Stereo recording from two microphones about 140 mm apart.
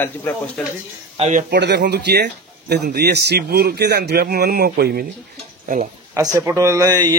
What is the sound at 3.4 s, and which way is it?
A man's voice, 90° right.